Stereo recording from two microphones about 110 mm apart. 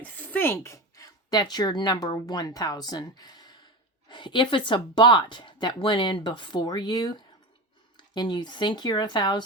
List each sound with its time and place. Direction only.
0.2 s speech: 20° left (ahead or behind); by 9.4 s 40° left (ahead or behind)